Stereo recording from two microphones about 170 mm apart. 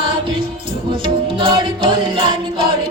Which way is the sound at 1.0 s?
30° right (ahead or behind).